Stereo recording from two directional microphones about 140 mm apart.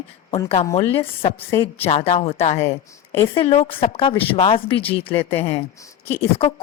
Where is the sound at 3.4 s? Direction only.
45° left (ahead or behind).